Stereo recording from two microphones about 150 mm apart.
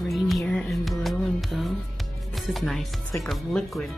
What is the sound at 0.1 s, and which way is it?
Music, centre (ahead or behind).